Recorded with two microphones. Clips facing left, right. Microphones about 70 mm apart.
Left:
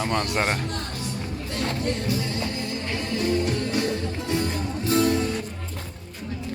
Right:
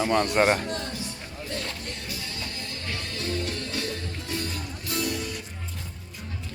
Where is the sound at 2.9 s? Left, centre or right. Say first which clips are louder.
Left 7 dB; left.